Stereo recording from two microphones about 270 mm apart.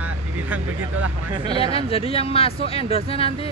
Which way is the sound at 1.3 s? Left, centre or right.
Centre.